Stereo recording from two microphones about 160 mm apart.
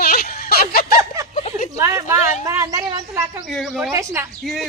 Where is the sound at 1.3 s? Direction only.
45° left (ahead or behind).